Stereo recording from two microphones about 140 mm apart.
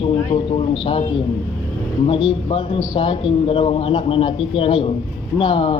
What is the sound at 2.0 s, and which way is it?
A man's voice, 40° left (ahead or behind).